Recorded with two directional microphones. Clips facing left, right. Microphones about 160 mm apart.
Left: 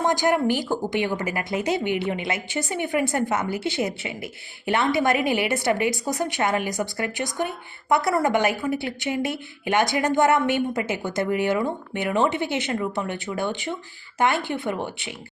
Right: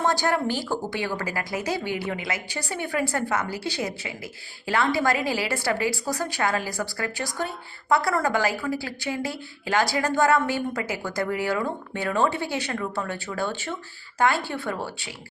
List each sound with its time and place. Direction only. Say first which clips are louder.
0.0 s a woman's voice: left 3 dB; 15° left (ahead or behind)